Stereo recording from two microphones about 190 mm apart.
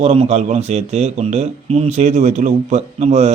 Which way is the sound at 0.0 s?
30° right (ahead or behind).